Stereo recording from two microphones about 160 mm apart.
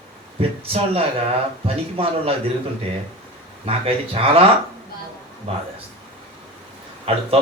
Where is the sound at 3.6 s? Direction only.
40° right (ahead or behind).